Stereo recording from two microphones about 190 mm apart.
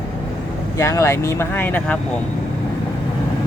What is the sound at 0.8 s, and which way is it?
Speech, 15° left (ahead or behind).